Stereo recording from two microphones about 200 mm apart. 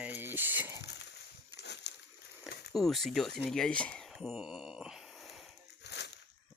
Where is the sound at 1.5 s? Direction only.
60° left (ahead or behind).